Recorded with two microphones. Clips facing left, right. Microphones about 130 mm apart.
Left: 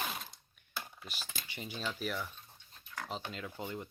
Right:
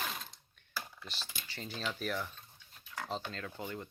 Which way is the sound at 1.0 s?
10° left (ahead or behind).